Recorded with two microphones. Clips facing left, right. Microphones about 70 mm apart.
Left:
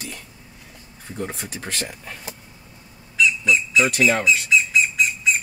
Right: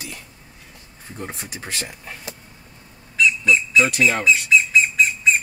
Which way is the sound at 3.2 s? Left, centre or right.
Right.